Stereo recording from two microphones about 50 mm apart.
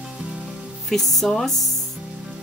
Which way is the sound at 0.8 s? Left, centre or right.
Centre.